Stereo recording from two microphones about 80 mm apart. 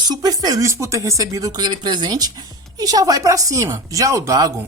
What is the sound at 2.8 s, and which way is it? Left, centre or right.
Speech, right.